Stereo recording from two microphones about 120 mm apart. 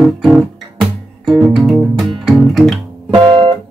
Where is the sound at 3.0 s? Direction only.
45° right (ahead or behind).